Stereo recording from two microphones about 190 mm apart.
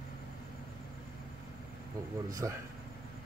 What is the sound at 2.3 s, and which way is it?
Speech, 15° right (ahead or behind).